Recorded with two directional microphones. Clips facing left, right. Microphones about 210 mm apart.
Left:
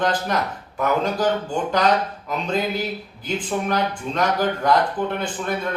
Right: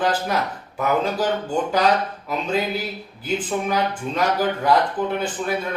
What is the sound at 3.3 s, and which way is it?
Speech, 5° right (ahead or behind).